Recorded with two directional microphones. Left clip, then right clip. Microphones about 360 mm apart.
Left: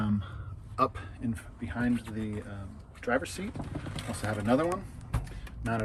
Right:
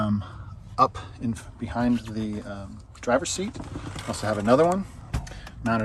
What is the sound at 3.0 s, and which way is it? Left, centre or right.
Speech, centre.